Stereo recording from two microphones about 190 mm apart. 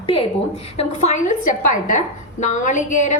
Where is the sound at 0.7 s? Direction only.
35° left (ahead or behind).